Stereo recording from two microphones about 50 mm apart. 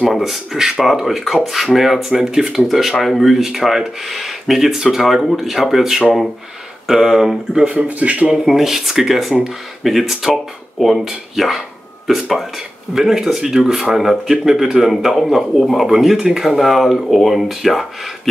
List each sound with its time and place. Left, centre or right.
0.1 s speech: centre
7.6 s speech: right
8.3 s speech: centre
16.4 s speech: centre